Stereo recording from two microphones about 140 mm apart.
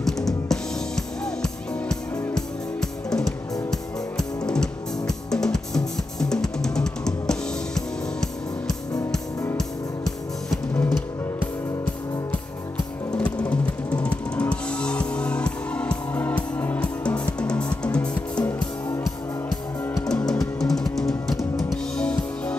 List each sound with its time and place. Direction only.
0.0 s music: 5° left (ahead or behind)
4.5 s music: 5° left (ahead or behind)
13.2 s music: 10° left (ahead or behind)
19.9 s music: 5° left (ahead or behind)